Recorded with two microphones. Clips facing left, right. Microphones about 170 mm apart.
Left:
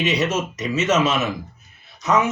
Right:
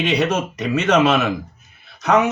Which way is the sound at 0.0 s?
60° right (ahead or behind).